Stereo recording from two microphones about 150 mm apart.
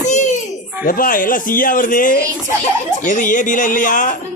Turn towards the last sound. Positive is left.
turn(degrees=60)  # may be behind; listen again after turning